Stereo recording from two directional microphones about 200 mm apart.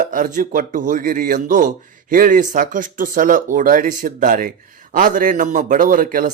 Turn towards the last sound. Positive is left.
turn(degrees=-45)  # may be behind; listen again after turning